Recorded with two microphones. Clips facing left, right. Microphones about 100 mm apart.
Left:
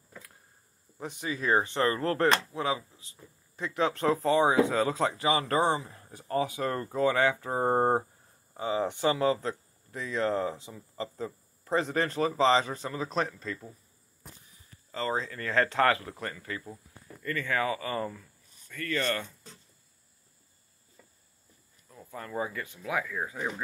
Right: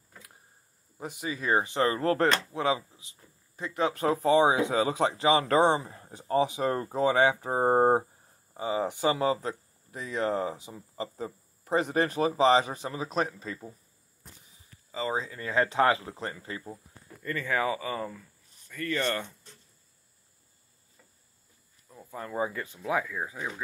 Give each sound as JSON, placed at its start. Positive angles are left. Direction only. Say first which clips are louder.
{"t": 0.9, "sound": "speech", "louder": "even", "side_deg": -5}
{"t": 2.5, "sound": "speech", "louder": "right 3 dB", "side_deg": -30}
{"t": 3.5, "sound": "speech", "louder": "even", "side_deg": 0}
{"t": 5.8, "sound": "speech", "louder": "right 2 dB", "side_deg": -45}
{"t": 6.1, "sound": "speech", "louder": "right 3 dB", "side_deg": -20}
{"t": 14.9, "sound": "speech", "louder": "even", "side_deg": -10}
{"t": 17.8, "sound": "speech", "louder": "left 1 dB", "side_deg": 0}
{"t": 18.7, "sound": "speech", "louder": "right 1 dB", "side_deg": -20}
{"t": 22.1, "sound": "speech", "louder": "right 2 dB", "side_deg": -20}